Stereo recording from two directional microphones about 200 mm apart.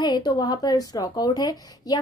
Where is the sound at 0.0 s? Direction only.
20° left (ahead or behind).